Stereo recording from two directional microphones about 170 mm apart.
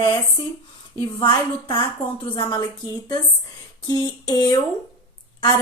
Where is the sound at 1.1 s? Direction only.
30° left (ahead or behind).